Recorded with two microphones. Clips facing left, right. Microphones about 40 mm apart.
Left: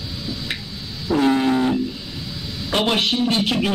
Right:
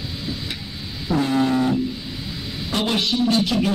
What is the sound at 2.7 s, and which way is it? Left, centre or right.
Speech, left.